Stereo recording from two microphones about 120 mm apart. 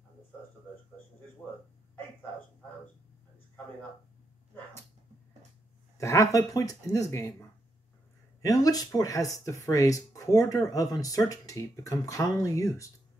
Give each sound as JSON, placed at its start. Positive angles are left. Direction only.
{"t": 5.9, "sound": "speech", "side_deg": 25}